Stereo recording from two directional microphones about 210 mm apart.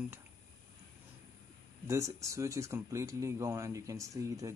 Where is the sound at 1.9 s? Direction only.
15° right (ahead or behind).